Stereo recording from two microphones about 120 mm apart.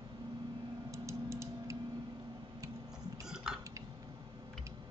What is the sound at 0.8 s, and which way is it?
Mechanisms, 25° right (ahead or behind).